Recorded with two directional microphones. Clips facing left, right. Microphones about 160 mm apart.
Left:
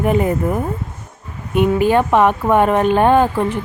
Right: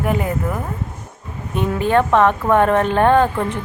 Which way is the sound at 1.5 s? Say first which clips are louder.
Left 3 dB; 10° left (ahead or behind).